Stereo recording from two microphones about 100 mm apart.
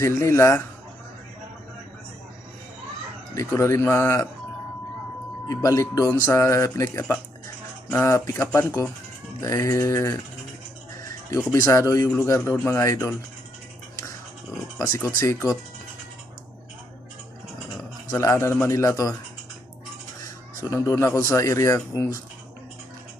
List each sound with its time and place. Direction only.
0.0 s a man's voice: 30° left (ahead or behind)
3.3 s a man's voice: 30° left (ahead or behind)
5.5 s a man's voice: 35° left (ahead or behind)
8.0 s a man's voice: 30° left (ahead or behind)
11.3 s a man's voice: 35° left (ahead or behind)
14.8 s a man's voice: 30° left (ahead or behind)
18.1 s a man's voice: 30° left (ahead or behind)
20.6 s a man's voice: 30° left (ahead or behind)